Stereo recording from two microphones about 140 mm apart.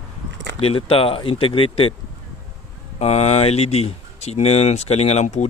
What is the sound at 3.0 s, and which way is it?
Speech, 50° left (ahead or behind).